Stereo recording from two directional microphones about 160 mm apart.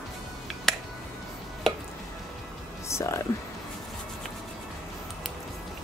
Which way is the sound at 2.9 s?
15° left (ahead or behind).